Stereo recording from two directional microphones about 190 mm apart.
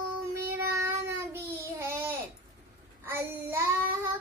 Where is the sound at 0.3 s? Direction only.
15° right (ahead or behind).